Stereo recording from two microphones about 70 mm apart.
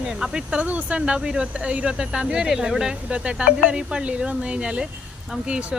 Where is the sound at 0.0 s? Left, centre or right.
Centre.